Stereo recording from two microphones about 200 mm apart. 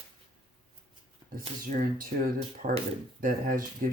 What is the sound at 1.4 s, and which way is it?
Speech, 40° right (ahead or behind).